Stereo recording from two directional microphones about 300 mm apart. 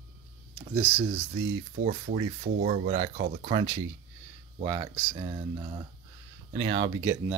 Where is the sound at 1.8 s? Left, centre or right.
Right; by 5.1 s centre.